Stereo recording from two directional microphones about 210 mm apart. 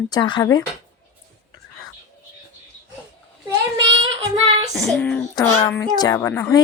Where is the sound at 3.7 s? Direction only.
25° right (ahead or behind).